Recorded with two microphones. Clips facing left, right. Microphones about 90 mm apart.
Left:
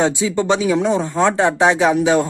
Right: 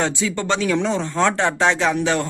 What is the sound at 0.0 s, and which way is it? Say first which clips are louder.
Speech: left 5 dB; 15° left (ahead or behind).